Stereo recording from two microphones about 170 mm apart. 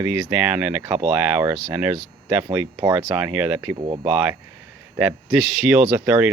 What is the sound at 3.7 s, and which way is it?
Speech, 30° right (ahead or behind).